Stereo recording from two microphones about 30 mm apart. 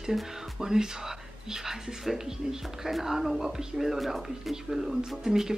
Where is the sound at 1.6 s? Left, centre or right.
Centre.